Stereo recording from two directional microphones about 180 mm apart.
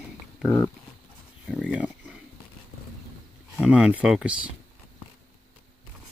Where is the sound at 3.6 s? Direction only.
5° right (ahead or behind).